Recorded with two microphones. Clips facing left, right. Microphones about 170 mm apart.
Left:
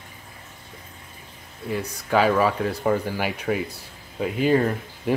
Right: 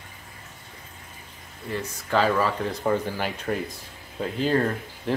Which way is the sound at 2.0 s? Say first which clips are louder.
Left 3 dB; 10° left (ahead or behind).